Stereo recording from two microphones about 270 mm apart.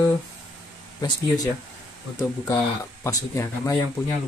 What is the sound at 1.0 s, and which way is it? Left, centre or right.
Speech, centre.